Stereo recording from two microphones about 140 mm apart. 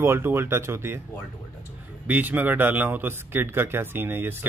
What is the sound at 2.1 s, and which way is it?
Speech, 10° right (ahead or behind).